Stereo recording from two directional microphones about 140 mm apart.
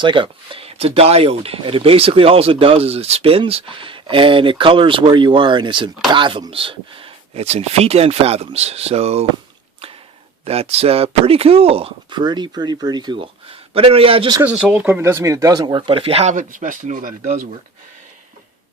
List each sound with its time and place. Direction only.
0.0 s speech: 35° right (ahead or behind)
10.4 s speech: 45° right (ahead or behind)
14.4 s speech: 10° right (ahead or behind); by 16.3 s 45° right (ahead or behind)
16.3 s speech: 70° right (ahead or behind)
17.2 s speech: 65° right (ahead or behind)